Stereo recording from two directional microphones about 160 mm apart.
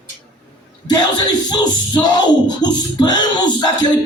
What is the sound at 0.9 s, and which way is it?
Music, 25° left (ahead or behind).